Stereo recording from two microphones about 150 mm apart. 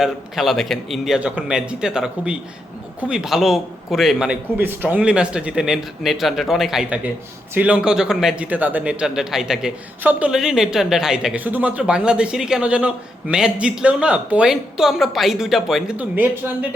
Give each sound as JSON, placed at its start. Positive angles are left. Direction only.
{"t": 0.0, "sound": "a man's voice", "side_deg": 0}
{"t": 4.5, "sound": "a man's voice", "side_deg": -15}